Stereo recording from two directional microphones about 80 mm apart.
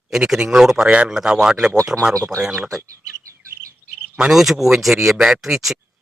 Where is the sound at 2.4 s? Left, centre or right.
Centre.